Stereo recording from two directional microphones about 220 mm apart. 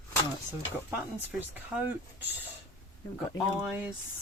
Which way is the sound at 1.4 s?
10° right (ahead or behind).